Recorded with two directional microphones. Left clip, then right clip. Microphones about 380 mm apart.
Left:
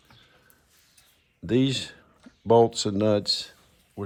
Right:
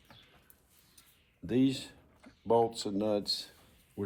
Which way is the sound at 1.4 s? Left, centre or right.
Centre.